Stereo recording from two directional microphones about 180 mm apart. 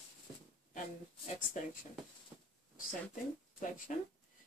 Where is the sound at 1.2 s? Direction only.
45° left (ahead or behind).